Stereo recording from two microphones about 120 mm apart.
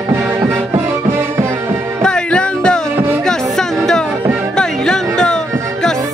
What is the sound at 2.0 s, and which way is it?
Music, 5° left (ahead or behind).